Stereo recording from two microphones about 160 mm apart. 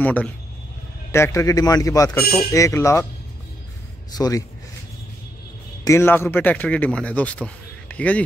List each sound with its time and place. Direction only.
0.0 s a man's voice: 10° left (ahead or behind)
4.1 s a man's voice: 20° left (ahead or behind)
5.9 s a man's voice: 15° left (ahead or behind)